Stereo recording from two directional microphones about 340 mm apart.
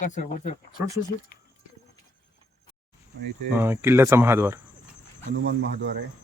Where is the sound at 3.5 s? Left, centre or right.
Centre.